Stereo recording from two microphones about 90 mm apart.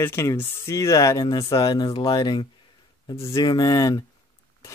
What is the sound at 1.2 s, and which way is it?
Speech, 55° left (ahead or behind).